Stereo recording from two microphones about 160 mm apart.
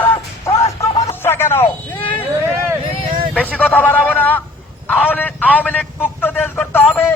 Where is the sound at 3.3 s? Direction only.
10° left (ahead or behind).